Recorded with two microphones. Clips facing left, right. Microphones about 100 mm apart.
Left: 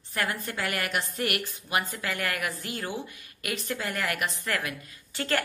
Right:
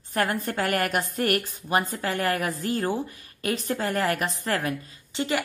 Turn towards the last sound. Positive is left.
turn(degrees=-20)  # may be behind; listen again after turning